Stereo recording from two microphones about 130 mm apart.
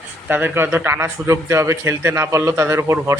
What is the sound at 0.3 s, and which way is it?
A man's voice, 15° right (ahead or behind).